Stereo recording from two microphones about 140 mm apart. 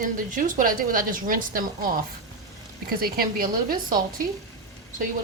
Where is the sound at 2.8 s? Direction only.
90° right.